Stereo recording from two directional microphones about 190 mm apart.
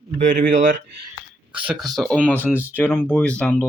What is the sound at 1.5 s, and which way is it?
A man's voice, 5° right (ahead or behind).